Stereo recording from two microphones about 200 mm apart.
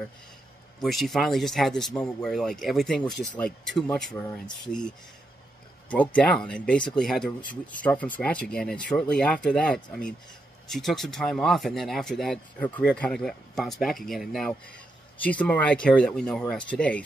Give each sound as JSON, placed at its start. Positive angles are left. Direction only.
{"t": 0.7, "sound": "speech", "side_deg": 0}
{"t": 5.9, "sound": "speech", "side_deg": 5}